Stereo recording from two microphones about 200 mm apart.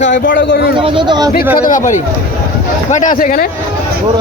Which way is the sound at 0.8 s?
25° right (ahead or behind).